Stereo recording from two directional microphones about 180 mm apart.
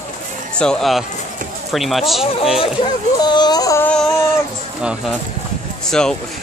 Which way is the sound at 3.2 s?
25° left (ahead or behind).